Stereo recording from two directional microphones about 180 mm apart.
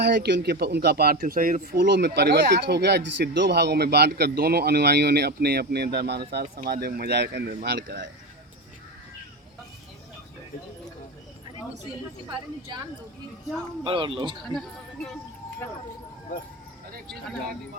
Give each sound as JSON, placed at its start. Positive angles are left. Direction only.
{"t": 0.0, "sound": "speech", "side_deg": -70}
{"t": 13.8, "sound": "a man's voice", "side_deg": -30}